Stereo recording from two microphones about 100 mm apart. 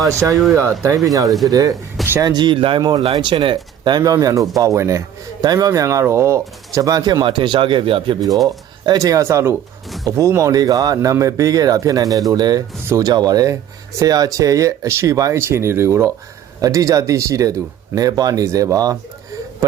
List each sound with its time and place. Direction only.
0.5 s speech: 30° right (ahead or behind); by 8.2 s 60° right (ahead or behind)
8.4 s speech: 35° right (ahead or behind)